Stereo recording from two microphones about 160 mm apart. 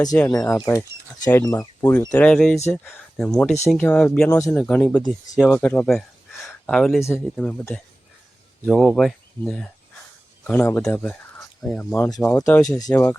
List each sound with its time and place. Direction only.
0.3 s speech: 20° left (ahead or behind); by 6.1 s 5° left (ahead or behind)
6.4 s a sound: centre (ahead or behind)
7.0 s speech: 10° left (ahead or behind)
8.6 s speech: centre (ahead or behind)
11.6 s speech: 5° left (ahead or behind)
11.9 s speech: 20° left (ahead or behind)